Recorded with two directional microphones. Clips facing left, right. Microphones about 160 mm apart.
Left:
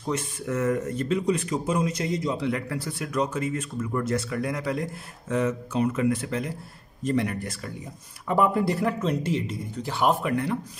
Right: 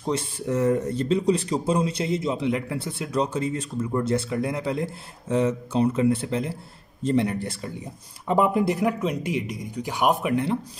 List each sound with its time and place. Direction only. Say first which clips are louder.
0.0 s speech: right 2 dB; 30° right (ahead or behind)